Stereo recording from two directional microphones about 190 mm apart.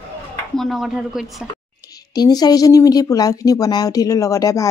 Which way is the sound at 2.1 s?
20° left (ahead or behind).